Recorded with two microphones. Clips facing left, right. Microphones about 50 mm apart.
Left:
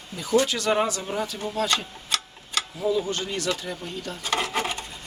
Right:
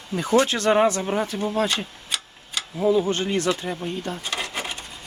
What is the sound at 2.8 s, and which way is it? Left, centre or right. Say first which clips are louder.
Speech: right 6 dB; right.